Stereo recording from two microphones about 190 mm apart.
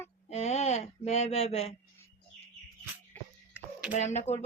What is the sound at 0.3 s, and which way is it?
Speech, 35° left (ahead or behind).